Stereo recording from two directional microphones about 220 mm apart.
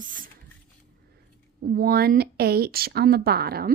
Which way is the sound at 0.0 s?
35° right (ahead or behind).